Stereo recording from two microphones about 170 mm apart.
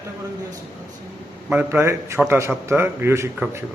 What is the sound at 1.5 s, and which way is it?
A man's voice, 10° right (ahead or behind).